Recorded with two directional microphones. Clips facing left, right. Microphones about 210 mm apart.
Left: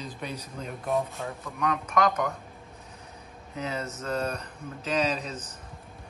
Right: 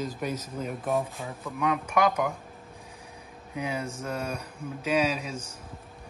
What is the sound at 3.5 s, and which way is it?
Speech, 10° right (ahead or behind).